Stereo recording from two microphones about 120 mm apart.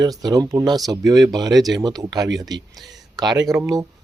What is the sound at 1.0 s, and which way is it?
Speech, centre (ahead or behind).